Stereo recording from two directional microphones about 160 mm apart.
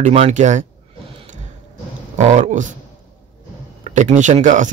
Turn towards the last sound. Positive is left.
turn(degrees=-50)  # may be behind; listen again after turning